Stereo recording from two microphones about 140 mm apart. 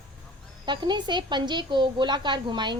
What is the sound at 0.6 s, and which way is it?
A woman's voice, 35° right (ahead or behind).